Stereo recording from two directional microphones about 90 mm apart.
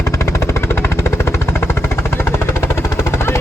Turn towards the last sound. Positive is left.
turn(degrees=25)  # may be behind; listen again after turning